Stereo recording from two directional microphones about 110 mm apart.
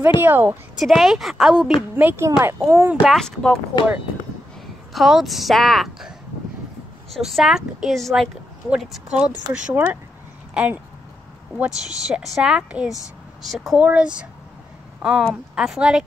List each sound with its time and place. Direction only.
0.2 s speech: 15° right (ahead or behind)
0.7 s speech: centre (ahead or behind)
2.0 s a child's voice: 15° right (ahead or behind)
2.9 s speech: 10° right (ahead or behind)
3.2 s speech: 5° left (ahead or behind)
4.9 s a woman's voice: centre (ahead or behind)
15.0 s a sound: 5° right (ahead or behind)
15.5 s speech: 5° right (ahead or behind)